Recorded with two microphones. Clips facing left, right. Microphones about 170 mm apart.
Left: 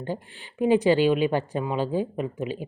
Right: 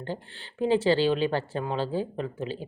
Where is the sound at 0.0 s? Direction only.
15° left (ahead or behind).